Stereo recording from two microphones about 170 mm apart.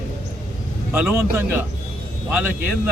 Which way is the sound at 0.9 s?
10° right (ahead or behind).